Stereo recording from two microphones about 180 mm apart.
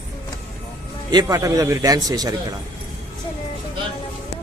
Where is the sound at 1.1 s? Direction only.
20° right (ahead or behind).